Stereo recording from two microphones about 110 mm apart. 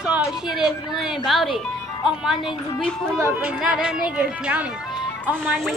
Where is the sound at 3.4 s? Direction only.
10° right (ahead or behind).